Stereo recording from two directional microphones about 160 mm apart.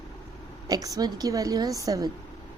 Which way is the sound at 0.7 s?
25° right (ahead or behind).